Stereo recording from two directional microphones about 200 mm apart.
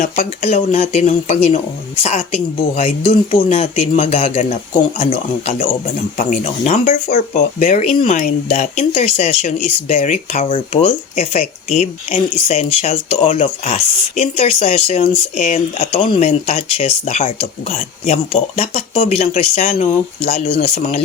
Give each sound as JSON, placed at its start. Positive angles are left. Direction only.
{"t": 0.5, "sound": "speech", "side_deg": 30}
{"t": 2.7, "sound": "speech", "side_deg": 30}
{"t": 6.1, "sound": "speech", "side_deg": 35}